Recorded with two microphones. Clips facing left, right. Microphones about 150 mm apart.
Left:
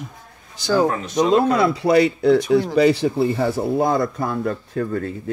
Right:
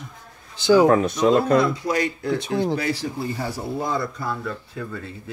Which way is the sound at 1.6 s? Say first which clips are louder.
Left 7 dB; 70° left (ahead or behind).